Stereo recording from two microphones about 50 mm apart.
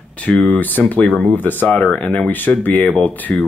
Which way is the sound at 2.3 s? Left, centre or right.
Left.